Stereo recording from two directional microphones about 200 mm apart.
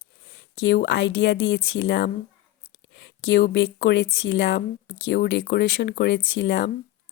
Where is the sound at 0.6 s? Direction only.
60° left (ahead or behind).